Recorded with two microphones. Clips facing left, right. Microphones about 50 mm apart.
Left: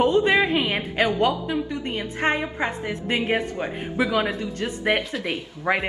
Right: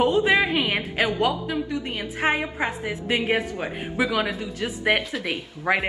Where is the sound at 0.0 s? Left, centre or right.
Centre.